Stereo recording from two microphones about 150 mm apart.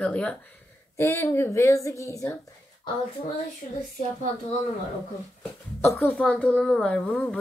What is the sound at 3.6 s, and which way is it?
Speech, 55° left (ahead or behind).